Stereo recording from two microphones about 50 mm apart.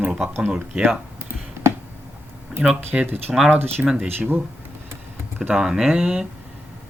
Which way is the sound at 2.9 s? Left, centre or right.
Centre.